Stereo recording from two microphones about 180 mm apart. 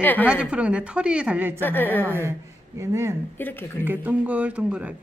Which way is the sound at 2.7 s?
15° right (ahead or behind).